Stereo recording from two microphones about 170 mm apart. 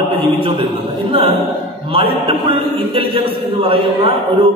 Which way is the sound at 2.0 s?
30° right (ahead or behind).